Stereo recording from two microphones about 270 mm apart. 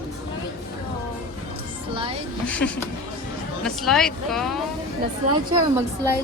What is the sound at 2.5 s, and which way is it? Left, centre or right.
Speech, centre.